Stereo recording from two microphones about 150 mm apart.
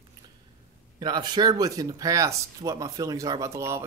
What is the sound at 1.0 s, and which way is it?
Speech, 30° right (ahead or behind).